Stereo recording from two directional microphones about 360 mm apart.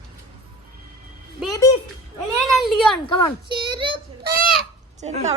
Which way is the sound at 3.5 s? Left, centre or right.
Centre.